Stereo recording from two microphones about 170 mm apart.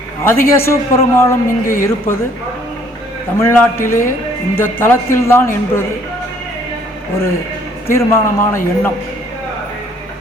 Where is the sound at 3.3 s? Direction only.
15° left (ahead or behind).